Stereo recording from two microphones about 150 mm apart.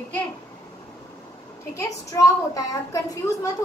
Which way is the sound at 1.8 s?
20° left (ahead or behind).